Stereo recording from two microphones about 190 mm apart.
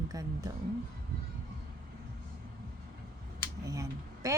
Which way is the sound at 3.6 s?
15° right (ahead or behind).